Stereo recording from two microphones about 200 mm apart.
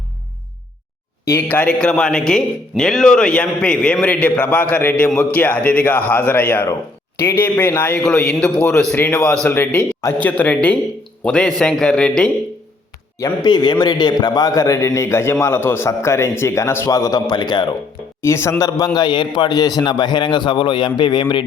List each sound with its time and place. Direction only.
1.2 s a man's voice: 15° left (ahead or behind)
13.1 s a man's voice: 20° left (ahead or behind)